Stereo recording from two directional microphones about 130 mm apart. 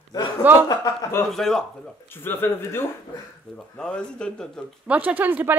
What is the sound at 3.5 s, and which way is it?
Speech, 5° left (ahead or behind).